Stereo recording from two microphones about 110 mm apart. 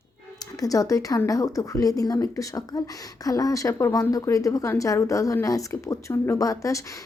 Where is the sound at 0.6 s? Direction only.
30° left (ahead or behind).